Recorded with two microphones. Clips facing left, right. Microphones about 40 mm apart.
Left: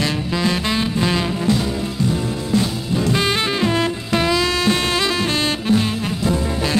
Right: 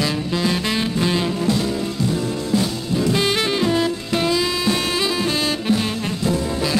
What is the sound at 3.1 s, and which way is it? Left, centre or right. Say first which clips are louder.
Saxophone: left 1 dB; centre.